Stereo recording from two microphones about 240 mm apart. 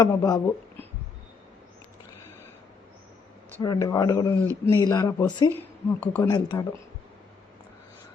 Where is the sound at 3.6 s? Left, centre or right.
Centre.